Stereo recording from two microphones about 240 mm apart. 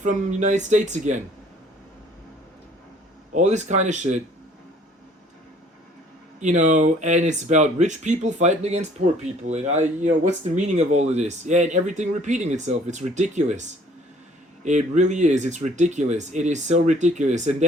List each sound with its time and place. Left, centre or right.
0.0 s speech: right
3.3 s speech: right
6.4 s speech: right
9.0 s speech: right
9.5 s speech: right